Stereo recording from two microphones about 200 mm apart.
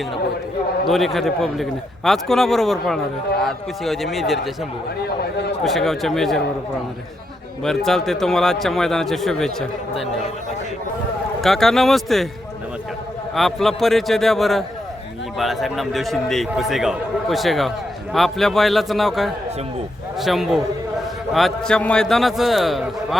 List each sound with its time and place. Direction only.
0.9 s a man's voice: centre (ahead or behind)
5.0 s a man's voice: 55° left (ahead or behind)
5.6 s a man's voice: centre (ahead or behind)
7.6 s a man's voice: centre (ahead or behind)
11.3 s a man's voice: centre (ahead or behind)
13.3 s a man's voice: centre (ahead or behind)